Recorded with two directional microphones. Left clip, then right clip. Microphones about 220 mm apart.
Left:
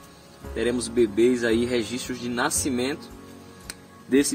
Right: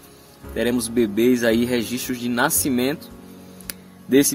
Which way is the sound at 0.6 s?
45° right (ahead or behind).